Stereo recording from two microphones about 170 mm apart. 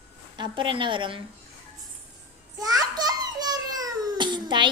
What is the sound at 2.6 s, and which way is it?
Babbling, 25° right (ahead or behind).